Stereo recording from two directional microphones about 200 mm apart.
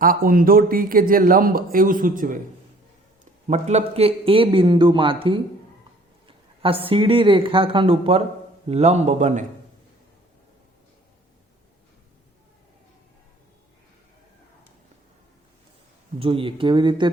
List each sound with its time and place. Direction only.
0.0 s speech: 45° right (ahead or behind)
3.4 s a man's voice: 35° right (ahead or behind)
16.1 s a man's voice: 25° right (ahead or behind)